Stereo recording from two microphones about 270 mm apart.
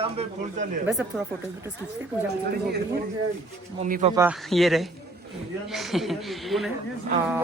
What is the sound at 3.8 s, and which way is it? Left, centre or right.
Speech, right.